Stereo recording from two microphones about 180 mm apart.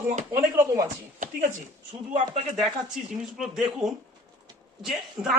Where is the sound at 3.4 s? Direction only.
5° right (ahead or behind).